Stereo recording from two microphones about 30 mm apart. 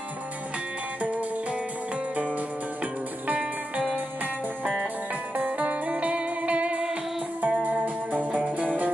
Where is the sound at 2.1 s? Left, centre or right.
Right.